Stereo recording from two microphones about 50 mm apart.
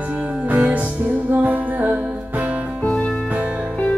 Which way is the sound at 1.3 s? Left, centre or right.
Right.